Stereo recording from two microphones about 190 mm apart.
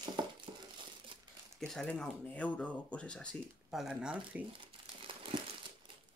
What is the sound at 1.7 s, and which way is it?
Speech, 5° left (ahead or behind).